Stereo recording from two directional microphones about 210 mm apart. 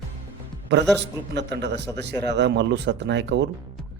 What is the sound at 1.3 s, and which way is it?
Speech, 55° right (ahead or behind).